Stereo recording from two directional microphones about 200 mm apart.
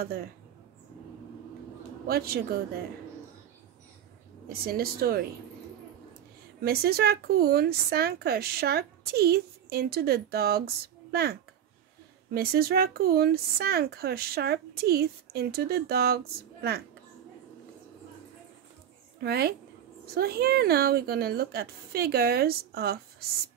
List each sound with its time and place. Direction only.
0.0 s speech: 50° right (ahead or behind)
2.0 s speech: 50° right (ahead or behind)
4.5 s speech: 50° right (ahead or behind)
6.6 s speech: 50° right (ahead or behind)
19.2 s speech: 50° right (ahead or behind)